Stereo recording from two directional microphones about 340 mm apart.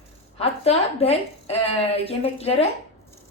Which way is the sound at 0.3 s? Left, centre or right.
Centre.